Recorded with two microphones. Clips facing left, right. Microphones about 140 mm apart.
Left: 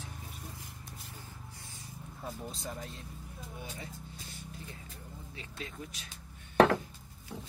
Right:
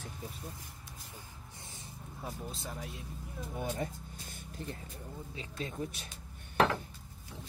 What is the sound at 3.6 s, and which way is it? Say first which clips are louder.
Speech: right 10 dB; 50° right (ahead or behind).